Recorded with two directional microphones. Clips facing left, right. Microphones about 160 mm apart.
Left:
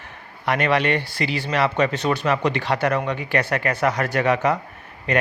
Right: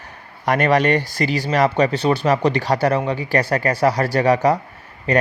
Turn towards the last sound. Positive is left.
turn(degrees=-35)  # may be behind; listen again after turning